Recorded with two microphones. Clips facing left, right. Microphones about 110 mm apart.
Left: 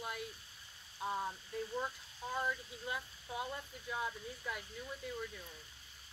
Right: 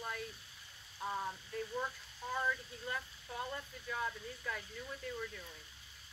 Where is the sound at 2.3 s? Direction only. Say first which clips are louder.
Right 1 dB; 15° left (ahead or behind).